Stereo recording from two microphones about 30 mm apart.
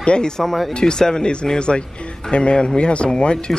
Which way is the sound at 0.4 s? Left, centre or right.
Centre.